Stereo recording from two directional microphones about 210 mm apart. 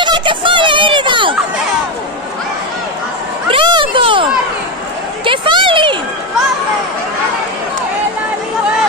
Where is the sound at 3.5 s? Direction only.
25° right (ahead or behind).